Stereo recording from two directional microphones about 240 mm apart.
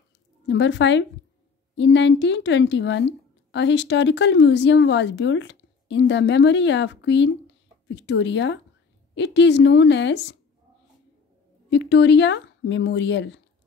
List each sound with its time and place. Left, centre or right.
0.5 s a woman's voice: left
11.7 s a woman's voice: left